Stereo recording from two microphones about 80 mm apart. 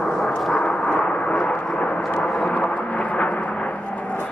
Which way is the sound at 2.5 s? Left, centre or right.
Left.